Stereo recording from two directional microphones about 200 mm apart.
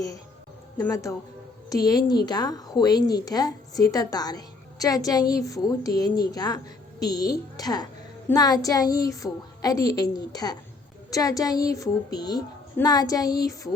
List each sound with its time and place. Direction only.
0.8 s a woman's voice: 15° left (ahead or behind)